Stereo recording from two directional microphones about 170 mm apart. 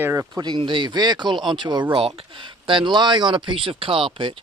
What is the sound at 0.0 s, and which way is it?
Speech, 15° right (ahead or behind).